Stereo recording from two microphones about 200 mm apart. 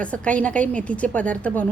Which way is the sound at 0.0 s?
5° left (ahead or behind).